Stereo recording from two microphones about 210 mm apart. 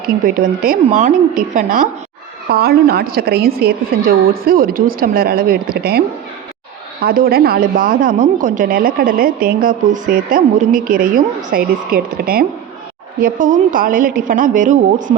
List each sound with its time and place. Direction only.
0.6 s a woman's voice: 40° right (ahead or behind)
7.0 s a woman's voice: 45° right (ahead or behind)